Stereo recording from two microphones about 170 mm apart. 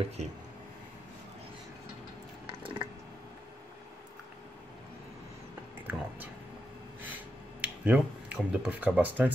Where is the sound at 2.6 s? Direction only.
30° right (ahead or behind).